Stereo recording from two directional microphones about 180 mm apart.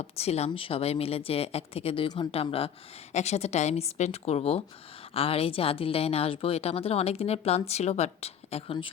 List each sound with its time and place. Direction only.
0.0 s speech: 35° left (ahead or behind)